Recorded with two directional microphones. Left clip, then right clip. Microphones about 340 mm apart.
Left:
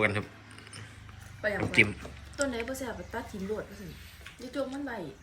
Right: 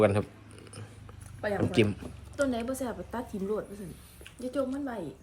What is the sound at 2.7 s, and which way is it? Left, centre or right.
Speech, right.